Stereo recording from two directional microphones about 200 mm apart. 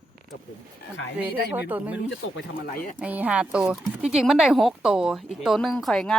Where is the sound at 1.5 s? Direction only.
10° right (ahead or behind).